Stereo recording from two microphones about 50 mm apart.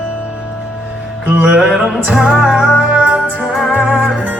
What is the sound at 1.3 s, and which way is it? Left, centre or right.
Music, right.